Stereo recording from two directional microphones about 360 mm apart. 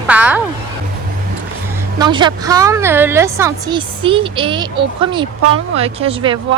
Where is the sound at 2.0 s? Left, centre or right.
Centre.